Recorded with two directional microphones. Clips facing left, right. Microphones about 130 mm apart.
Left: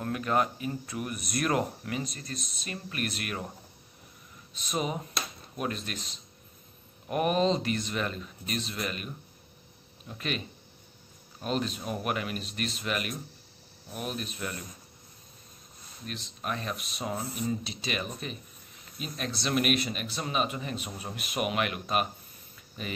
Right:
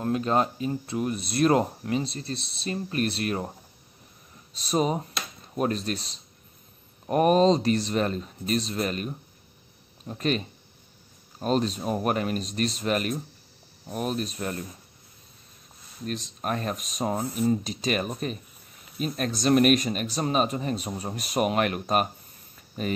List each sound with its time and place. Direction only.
0.0 s speech: 25° right (ahead or behind)
4.6 s speech: 35° right (ahead or behind)
16.1 s speech: 40° right (ahead or behind)
22.6 s a sound: 40° right (ahead or behind)